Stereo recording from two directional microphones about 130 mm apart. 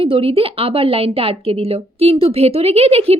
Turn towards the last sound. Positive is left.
turn(degrees=-50)  # may be behind; listen again after turning